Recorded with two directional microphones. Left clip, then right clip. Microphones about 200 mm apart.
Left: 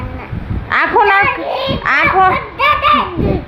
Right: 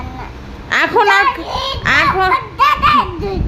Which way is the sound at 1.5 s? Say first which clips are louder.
Left 2 dB; 25° right (ahead or behind).